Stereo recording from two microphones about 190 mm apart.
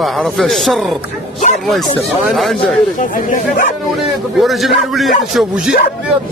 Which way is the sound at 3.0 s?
45° left (ahead or behind).